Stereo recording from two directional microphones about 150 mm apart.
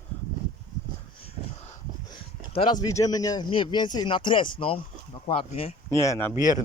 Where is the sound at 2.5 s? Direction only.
30° left (ahead or behind).